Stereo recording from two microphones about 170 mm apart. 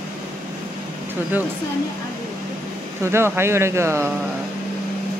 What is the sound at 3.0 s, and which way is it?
Speech, 15° right (ahead or behind).